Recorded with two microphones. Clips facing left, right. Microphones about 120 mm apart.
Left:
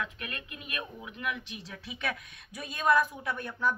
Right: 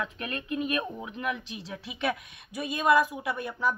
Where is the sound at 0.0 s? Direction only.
35° right (ahead or behind).